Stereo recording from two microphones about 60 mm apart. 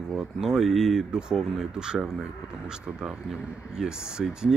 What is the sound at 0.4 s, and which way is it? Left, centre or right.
Speech, centre.